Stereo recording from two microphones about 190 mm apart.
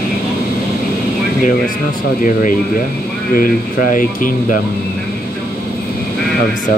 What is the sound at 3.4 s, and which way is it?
Speech, 45° left (ahead or behind).